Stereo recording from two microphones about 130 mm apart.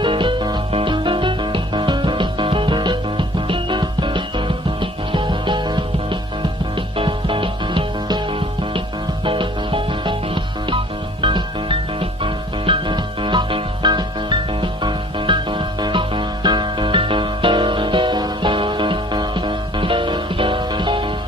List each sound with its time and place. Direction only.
0.0 s music: 40° right (ahead or behind)